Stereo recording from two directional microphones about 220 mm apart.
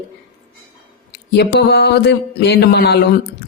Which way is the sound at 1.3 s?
45° left (ahead or behind).